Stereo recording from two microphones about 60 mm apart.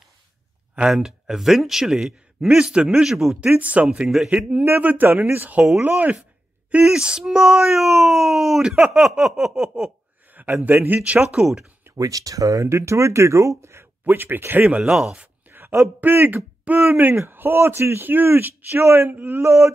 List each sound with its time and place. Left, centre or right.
0.7 s speech: centre
3.5 s speech: right
3.9 s speech: centre
4.6 s a man's voice: right
6.7 s speech: centre
10.3 s a man's voice: right
11.3 s speech: centre
12.0 s speech: right
14.8 s speech: centre
15.4 s a sound: right
16.0 s a man's voice: right
19.4 s speech: right